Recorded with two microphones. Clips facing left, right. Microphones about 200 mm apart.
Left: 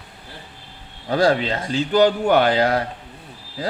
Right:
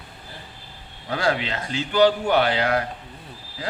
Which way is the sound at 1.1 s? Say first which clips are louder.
Left 6 dB; 35° left (ahead or behind).